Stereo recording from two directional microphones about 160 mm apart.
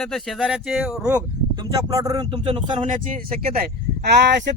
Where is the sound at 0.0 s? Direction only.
Centre (ahead or behind).